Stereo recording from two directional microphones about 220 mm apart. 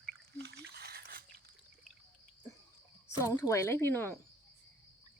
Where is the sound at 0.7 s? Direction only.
45° right (ahead or behind).